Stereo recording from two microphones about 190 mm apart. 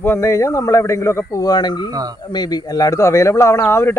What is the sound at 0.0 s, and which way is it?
Speech, 15° left (ahead or behind).